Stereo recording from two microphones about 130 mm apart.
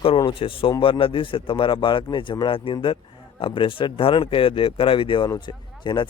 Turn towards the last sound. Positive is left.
turn(degrees=35)  # may be behind; listen again after turning